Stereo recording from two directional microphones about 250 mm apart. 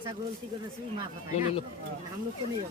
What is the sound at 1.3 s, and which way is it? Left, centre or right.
Speech, left.